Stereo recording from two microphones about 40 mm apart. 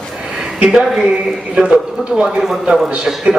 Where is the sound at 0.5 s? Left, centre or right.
Right.